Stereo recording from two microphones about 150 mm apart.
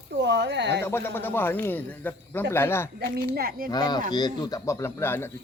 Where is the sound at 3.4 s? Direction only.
75° right (ahead or behind).